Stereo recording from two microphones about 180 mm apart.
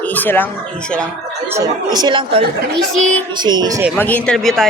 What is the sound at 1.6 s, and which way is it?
Speech, 25° right (ahead or behind).